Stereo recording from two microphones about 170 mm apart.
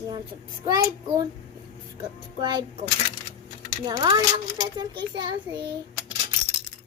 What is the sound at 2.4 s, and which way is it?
Speech, 25° right (ahead or behind).